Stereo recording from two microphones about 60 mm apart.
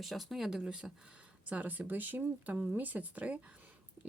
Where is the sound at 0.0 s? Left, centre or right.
Centre.